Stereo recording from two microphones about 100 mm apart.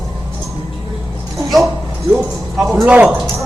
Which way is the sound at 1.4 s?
Centre (ahead or behind).